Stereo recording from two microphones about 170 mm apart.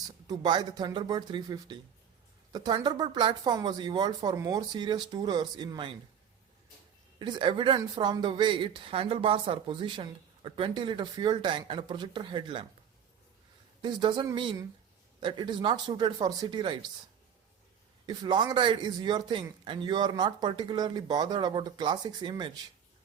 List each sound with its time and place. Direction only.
0.3 s speech: 25° right (ahead or behind)
7.2 s speech: 25° right (ahead or behind)
13.8 s speech: 25° right (ahead or behind)
18.0 s speech: 25° right (ahead or behind)